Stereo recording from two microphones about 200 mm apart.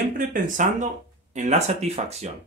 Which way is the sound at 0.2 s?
40° right (ahead or behind).